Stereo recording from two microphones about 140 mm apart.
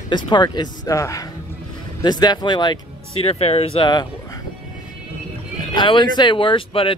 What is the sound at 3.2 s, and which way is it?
Speech, 45° left (ahead or behind).